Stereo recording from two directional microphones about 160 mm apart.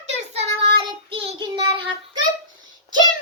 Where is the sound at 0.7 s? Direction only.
30° right (ahead or behind).